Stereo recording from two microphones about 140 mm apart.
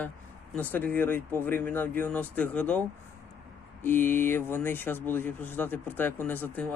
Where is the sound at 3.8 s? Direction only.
15° left (ahead or behind).